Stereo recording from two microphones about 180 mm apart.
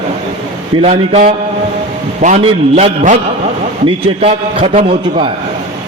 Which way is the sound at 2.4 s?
35° right (ahead or behind).